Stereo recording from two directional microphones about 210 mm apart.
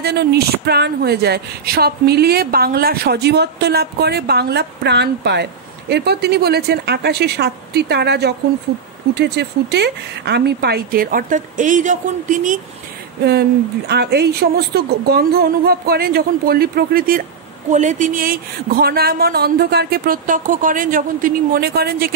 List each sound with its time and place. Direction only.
0.0 s speech: 50° right (ahead or behind)
13.2 s speech: 50° right (ahead or behind)